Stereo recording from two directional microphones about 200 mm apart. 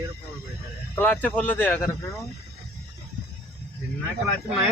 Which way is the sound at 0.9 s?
10° left (ahead or behind).